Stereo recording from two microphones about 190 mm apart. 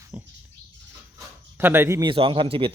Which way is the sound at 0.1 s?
10° right (ahead or behind).